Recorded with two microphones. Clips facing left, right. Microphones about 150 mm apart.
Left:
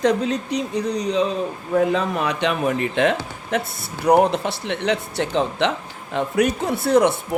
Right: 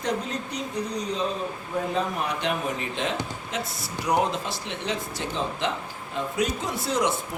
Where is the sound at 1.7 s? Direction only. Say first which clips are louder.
Left 8 dB; 90° left.